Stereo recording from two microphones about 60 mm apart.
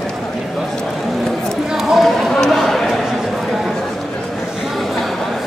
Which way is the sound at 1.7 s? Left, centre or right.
Centre.